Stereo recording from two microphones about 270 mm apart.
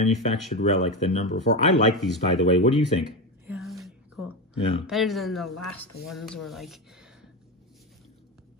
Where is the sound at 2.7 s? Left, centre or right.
Centre.